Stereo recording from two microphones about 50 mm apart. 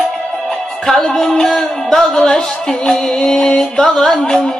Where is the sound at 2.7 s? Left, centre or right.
Centre.